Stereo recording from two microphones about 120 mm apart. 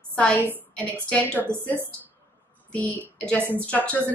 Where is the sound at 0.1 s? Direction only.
10° left (ahead or behind).